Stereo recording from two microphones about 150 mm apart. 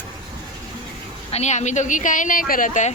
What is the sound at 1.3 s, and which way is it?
A woman's voice, 50° left (ahead or behind).